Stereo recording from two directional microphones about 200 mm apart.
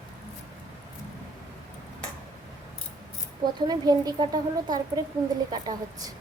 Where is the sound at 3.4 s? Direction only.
20° right (ahead or behind).